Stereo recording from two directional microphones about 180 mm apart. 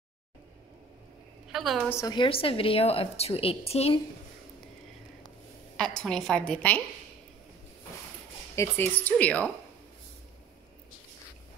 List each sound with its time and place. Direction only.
1.5 s a woman's voice: centre (ahead or behind)
1.9 s a woman's voice: 20° left (ahead or behind); by 4.0 s 35° left (ahead or behind)
5.8 s a woman's voice: 5° left (ahead or behind)
8.5 s speech: 10° left (ahead or behind)